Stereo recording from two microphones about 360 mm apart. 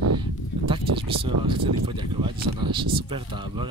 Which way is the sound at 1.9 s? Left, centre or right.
Centre.